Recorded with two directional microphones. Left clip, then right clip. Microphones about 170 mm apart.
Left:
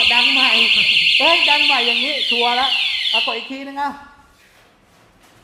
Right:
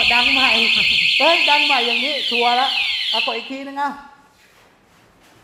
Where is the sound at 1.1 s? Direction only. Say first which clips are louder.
Left 1 dB; 10° right (ahead or behind).